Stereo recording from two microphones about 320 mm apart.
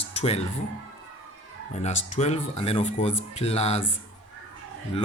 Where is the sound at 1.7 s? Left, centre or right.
Left.